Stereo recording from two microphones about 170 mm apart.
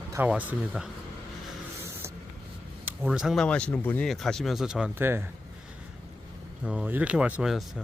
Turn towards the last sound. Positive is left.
turn(degrees=-5)  # may be behind; listen again after turning